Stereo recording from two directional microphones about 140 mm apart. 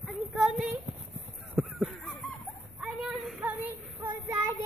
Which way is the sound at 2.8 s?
5° right (ahead or behind).